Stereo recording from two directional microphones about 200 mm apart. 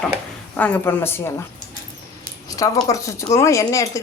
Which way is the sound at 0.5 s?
10° left (ahead or behind).